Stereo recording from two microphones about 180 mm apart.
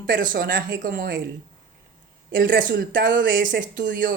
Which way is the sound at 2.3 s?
55° right (ahead or behind).